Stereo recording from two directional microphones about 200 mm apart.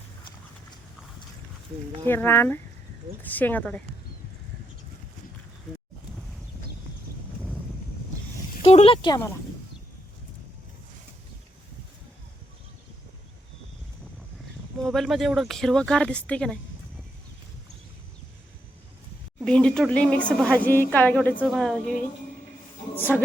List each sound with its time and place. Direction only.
2.0 s speech: 10° left (ahead or behind)
8.7 s speech: 30° left (ahead or behind)
14.8 s a woman's voice: centre (ahead or behind)
19.5 s a woman's voice: 5° left (ahead or behind)